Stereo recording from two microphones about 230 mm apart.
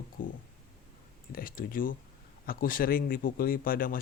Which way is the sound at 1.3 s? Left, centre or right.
Left.